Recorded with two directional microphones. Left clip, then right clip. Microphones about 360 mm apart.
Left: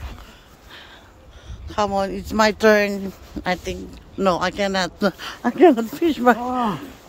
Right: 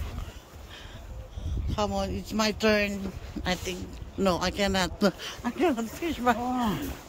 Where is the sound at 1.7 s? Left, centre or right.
Centre.